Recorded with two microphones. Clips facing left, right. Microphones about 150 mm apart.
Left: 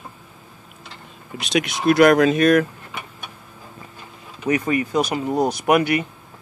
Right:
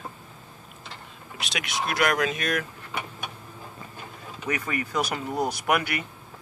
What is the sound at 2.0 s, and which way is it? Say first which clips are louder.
Speech: left 12 dB; 40° left (ahead or behind).